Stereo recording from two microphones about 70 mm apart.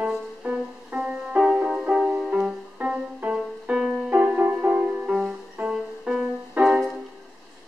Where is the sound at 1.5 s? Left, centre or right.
Centre.